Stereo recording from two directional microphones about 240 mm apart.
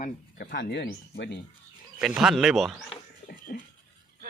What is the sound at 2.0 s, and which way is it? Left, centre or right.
Speech, centre.